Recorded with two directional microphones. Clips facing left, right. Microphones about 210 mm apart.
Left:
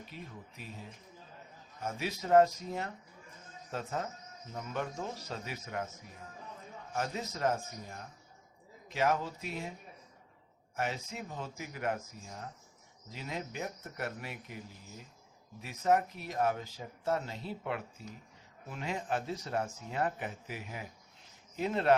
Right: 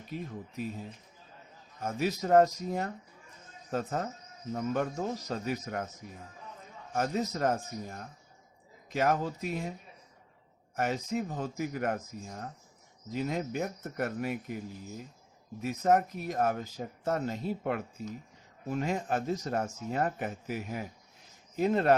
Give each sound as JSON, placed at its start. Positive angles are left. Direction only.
{"t": 0.1, "sound": "speech", "side_deg": -45}
{"t": 1.8, "sound": "speech", "side_deg": -45}
{"t": 6.9, "sound": "speech", "side_deg": -45}
{"t": 10.8, "sound": "speech", "side_deg": -40}
{"t": 15.6, "sound": "speech", "side_deg": -45}